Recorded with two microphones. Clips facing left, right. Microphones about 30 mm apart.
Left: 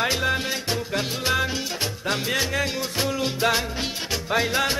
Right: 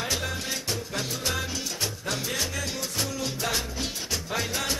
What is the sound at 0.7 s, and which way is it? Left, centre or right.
Music, left.